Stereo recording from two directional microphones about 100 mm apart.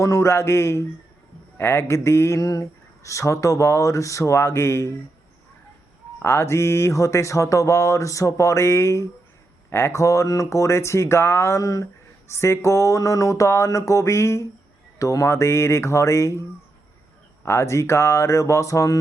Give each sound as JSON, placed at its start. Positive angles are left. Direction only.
{"t": 0.0, "sound": "speech", "side_deg": 30}
{"t": 6.1, "sound": "speech", "side_deg": 25}
{"t": 17.4, "sound": "speech", "side_deg": 30}